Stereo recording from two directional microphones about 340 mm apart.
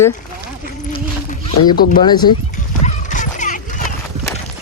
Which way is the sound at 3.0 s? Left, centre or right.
Left.